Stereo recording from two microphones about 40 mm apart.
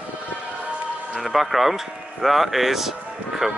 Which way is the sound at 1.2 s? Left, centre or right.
Centre.